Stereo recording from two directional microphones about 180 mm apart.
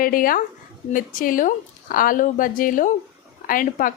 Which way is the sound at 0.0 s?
50° left (ahead or behind).